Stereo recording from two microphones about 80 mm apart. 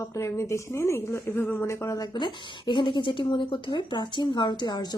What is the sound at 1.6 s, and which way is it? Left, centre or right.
Speech, left.